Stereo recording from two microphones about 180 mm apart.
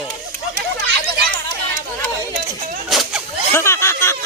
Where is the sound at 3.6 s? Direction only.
15° left (ahead or behind).